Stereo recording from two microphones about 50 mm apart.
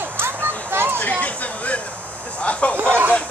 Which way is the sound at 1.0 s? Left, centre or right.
Left.